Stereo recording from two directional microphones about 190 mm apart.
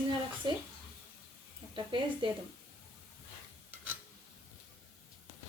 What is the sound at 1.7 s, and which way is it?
Speech, 25° right (ahead or behind).